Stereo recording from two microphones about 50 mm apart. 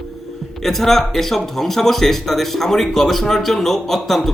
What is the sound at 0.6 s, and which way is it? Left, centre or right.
Speech, centre.